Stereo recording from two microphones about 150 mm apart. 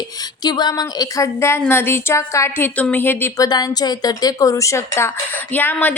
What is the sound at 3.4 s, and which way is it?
A woman's voice, 25° left (ahead or behind).